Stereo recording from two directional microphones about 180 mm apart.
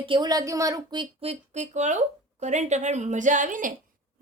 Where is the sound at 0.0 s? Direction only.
25° right (ahead or behind).